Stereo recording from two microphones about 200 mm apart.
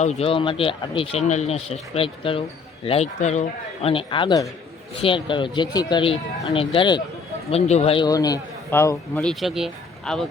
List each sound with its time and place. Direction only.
0.0 s a man's voice: 30° left (ahead or behind); by 9.3 s 15° left (ahead or behind)
9.3 s speech: centre (ahead or behind)